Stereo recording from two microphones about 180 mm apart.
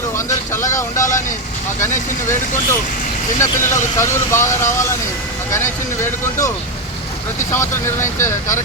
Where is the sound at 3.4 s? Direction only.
15° left (ahead or behind).